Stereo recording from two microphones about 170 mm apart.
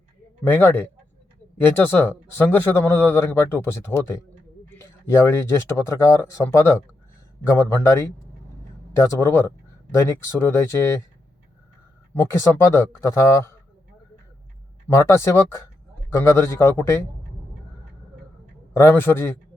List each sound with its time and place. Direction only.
0.4 s speech: 10° left (ahead or behind)
12.2 s speech: 15° left (ahead or behind)
14.8 s speech: 15° left (ahead or behind)
18.7 s speech: 15° left (ahead or behind)